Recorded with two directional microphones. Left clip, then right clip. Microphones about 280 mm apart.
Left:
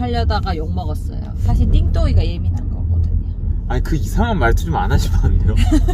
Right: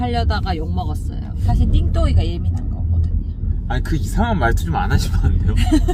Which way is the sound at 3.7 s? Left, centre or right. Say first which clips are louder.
Left 1 dB; centre.